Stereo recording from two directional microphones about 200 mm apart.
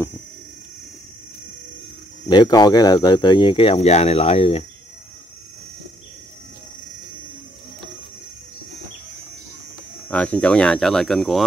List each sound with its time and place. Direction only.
2.2 s speech: 20° left (ahead or behind)
10.0 s speech: 5° left (ahead or behind)